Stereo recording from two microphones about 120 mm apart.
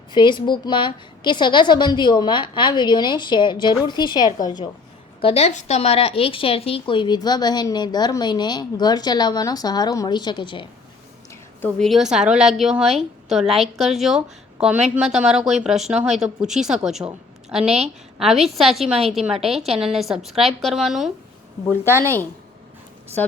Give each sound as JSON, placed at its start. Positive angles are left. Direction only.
{"t": 0.1, "sound": "a woman's voice", "side_deg": 40}
{"t": 5.2, "sound": "a woman's voice", "side_deg": 60}
{"t": 11.8, "sound": "speech", "side_deg": 0}
{"t": 21.8, "sound": "a woman's voice", "side_deg": -20}